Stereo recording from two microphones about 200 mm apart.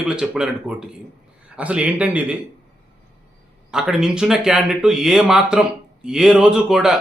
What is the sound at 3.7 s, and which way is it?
A man's voice, 5° right (ahead or behind).